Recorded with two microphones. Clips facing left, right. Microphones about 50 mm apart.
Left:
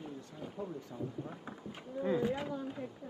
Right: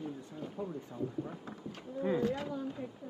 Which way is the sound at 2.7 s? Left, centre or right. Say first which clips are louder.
Even; centre.